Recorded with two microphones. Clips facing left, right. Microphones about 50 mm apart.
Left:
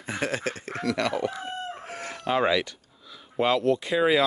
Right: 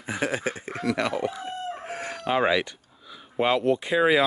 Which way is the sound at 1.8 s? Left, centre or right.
Right.